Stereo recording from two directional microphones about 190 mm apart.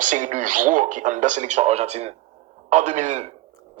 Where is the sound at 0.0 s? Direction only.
40° right (ahead or behind).